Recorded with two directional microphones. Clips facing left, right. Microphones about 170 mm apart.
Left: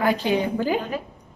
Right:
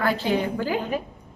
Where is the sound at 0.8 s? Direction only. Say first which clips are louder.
Right 1 dB; 15° right (ahead or behind).